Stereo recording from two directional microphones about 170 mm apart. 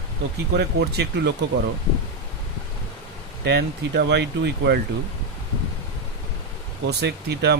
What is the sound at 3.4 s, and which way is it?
Speech, 80° right.